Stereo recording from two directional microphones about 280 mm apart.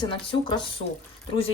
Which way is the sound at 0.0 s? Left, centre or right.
Centre.